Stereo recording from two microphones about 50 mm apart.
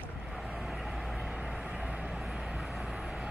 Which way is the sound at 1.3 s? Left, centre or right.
Centre.